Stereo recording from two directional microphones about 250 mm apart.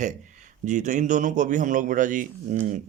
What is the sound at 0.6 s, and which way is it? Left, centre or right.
Speech, right.